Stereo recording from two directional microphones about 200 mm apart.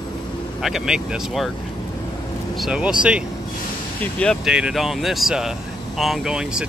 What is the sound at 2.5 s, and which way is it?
Speech, 5° right (ahead or behind).